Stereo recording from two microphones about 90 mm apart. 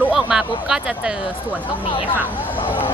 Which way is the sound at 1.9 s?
70° left (ahead or behind).